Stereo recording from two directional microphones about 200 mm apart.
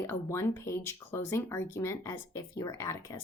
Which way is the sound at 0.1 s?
15° left (ahead or behind).